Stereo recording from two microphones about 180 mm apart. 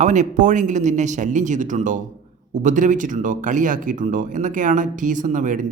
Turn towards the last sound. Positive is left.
turn(degrees=-45)  # may be behind; listen again after turning